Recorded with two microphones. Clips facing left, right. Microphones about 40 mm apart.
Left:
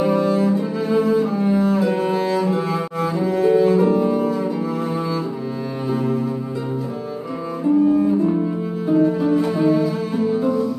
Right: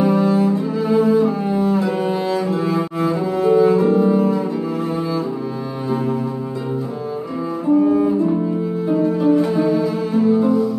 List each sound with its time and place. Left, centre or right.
0.0 s cello: centre
7.7 s double bass: centre
8.9 s cello: centre